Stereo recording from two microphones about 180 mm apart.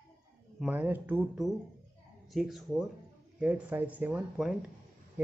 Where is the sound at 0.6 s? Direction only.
10° right (ahead or behind).